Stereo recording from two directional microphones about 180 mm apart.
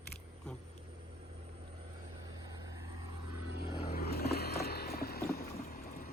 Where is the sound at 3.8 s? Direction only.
60° left (ahead or behind).